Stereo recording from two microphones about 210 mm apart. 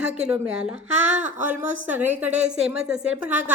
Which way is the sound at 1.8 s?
10° right (ahead or behind).